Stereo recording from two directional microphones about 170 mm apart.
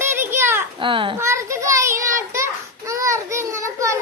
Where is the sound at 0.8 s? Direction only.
30° right (ahead or behind).